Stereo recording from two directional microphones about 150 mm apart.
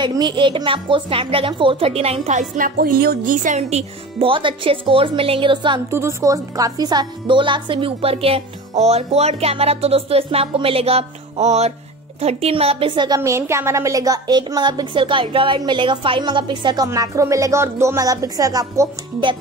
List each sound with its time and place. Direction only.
0.0 s speech: 30° right (ahead or behind); by 3.8 s 55° right (ahead or behind)
4.2 s speech: 35° right (ahead or behind)
5.9 s a woman's voice: 15° right (ahead or behind)